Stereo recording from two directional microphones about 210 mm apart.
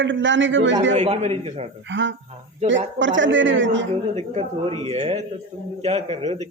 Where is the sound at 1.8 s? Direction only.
60° right (ahead or behind).